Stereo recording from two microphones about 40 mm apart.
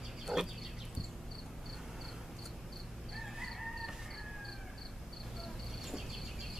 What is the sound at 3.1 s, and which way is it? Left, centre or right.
Chicken, centre.